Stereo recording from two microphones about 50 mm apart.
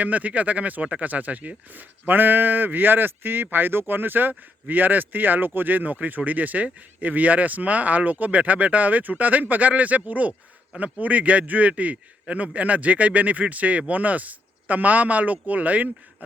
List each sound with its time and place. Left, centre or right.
0.0 s speech: right